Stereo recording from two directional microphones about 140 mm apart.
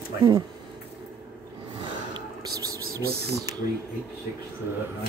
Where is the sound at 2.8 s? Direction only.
90° right.